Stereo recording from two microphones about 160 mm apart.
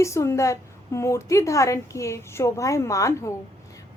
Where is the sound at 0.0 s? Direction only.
20° left (ahead or behind).